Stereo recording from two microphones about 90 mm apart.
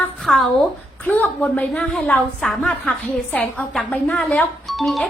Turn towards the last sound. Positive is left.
turn(degrees=0)  # may be behind; listen again after turning